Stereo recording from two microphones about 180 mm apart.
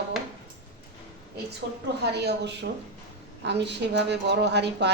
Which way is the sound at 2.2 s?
75° right (ahead or behind).